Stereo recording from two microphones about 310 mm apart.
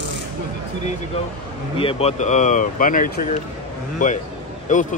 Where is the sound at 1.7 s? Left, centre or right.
Centre.